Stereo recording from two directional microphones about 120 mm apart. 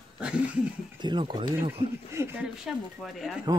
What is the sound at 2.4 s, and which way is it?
Speech, 5° right (ahead or behind).